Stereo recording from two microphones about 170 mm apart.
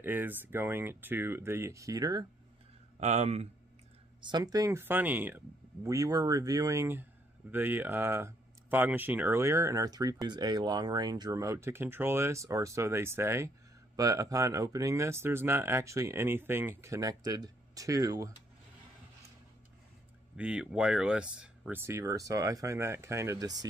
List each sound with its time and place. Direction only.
0.0 s speech: 10° right (ahead or behind)
3.0 s speech: 40° right (ahead or behind)
4.2 s speech: 25° right (ahead or behind)
20.3 s speech: 5° right (ahead or behind); by 23.7 s 20° right (ahead or behind)